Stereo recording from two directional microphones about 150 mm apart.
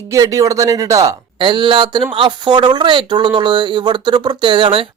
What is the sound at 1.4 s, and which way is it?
Speech, 35° right (ahead or behind).